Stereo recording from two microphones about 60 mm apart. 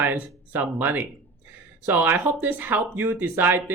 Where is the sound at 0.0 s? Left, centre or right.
Right.